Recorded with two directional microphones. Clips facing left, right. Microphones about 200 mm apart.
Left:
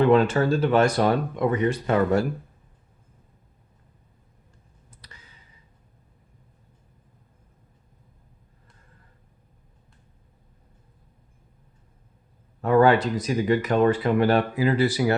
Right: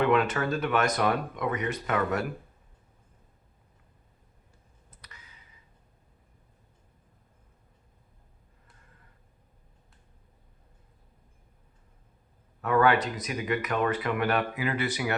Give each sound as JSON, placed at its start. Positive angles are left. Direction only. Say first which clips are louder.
{"t": 0.0, "sound": "speech", "louder": "left 6 dB", "side_deg": 30}
{"t": 4.9, "sound": "clicking", "louder": "left 3 dB", "side_deg": 30}
{"t": 12.6, "sound": "speech", "louder": "left 6 dB", "side_deg": 30}